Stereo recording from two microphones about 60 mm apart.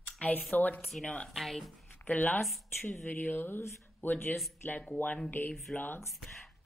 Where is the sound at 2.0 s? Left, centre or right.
Left.